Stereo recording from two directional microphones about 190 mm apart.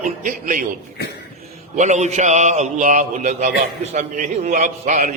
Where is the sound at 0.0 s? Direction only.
45° right (ahead or behind).